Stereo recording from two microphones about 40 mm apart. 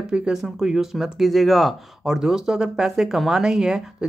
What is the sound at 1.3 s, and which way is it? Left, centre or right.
Speech, centre.